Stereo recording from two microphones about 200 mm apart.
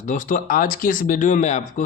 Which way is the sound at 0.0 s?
40° left (ahead or behind).